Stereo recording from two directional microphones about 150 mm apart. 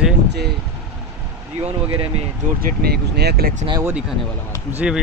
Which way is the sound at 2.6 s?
90° right.